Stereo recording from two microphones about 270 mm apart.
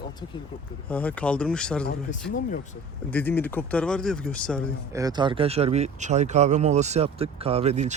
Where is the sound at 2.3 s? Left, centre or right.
Left.